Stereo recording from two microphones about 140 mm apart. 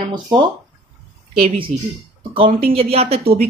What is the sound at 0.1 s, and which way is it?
Speech, 35° right (ahead or behind).